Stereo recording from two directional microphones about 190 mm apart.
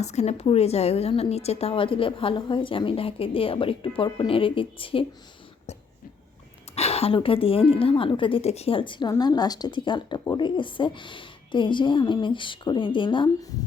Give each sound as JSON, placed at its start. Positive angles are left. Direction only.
{"t": 0.0, "sound": "a woman's voice", "side_deg": 35}
{"t": 6.7, "sound": "a woman's voice", "side_deg": 35}